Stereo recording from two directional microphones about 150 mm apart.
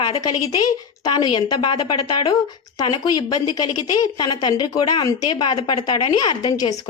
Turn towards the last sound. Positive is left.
turn(degrees=25)  # may be behind; listen again after turning